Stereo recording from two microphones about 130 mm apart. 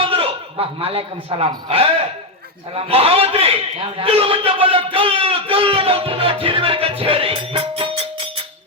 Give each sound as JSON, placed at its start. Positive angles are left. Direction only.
{"t": 0.0, "sound": "a man's voice", "side_deg": -45}